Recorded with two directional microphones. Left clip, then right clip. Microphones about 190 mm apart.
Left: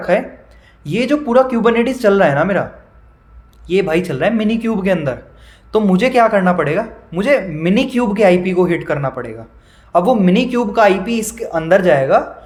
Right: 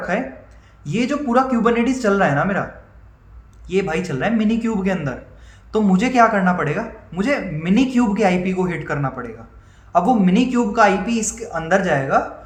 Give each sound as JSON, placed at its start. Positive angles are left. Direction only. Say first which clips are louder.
{"t": 0.0, "sound": "speech", "louder": "left 7 dB", "side_deg": 45}
{"t": 3.7, "sound": "speech", "louder": "left 6 dB", "side_deg": 45}